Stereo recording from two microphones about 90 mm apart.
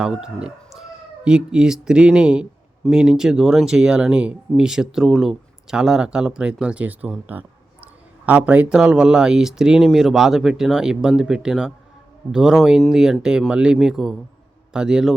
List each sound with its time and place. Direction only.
0.0 s speech: 10° right (ahead or behind)
7.3 s a sound: 20° right (ahead or behind)
8.3 s a man's voice: 15° right (ahead or behind)